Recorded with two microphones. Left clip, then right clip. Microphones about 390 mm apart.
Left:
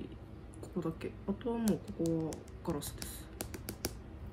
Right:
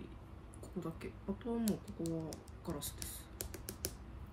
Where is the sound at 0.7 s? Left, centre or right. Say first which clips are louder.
Left 6 dB; centre.